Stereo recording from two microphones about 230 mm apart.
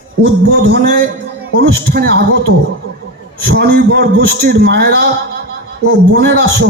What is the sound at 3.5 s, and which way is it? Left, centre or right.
A man's voice, right.